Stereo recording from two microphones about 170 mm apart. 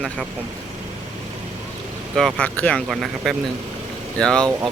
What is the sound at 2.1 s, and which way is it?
Speech, 5° left (ahead or behind).